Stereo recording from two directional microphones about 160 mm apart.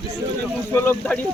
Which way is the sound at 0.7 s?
10° left (ahead or behind).